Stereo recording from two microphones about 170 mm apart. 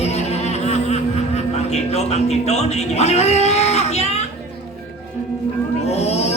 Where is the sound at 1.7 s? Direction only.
40° left (ahead or behind).